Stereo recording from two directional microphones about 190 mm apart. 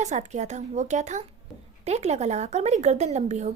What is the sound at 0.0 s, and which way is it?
Speech, 35° right (ahead or behind).